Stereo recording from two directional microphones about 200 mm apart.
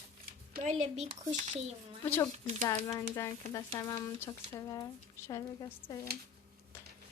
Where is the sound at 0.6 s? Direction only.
35° right (ahead or behind).